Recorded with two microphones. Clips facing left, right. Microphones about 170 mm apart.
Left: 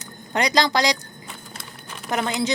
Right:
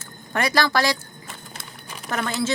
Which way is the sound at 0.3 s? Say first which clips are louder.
Left 1 dB; 20° left (ahead or behind).